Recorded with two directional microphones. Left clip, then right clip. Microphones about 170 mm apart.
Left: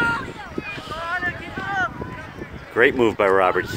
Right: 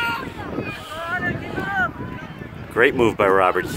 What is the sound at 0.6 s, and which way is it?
Boat, 55° right (ahead or behind).